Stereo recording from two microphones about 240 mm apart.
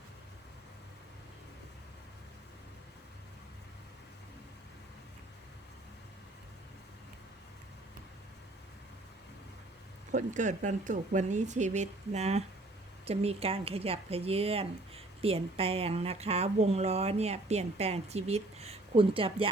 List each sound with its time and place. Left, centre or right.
10.1 s speech: right